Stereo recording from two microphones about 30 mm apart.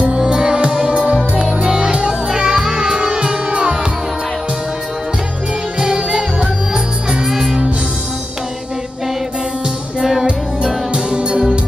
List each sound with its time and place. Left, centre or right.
0.1 s music: right
3.0 s music: right
5.8 s music: right
7.2 s music: centre
10.9 s music: right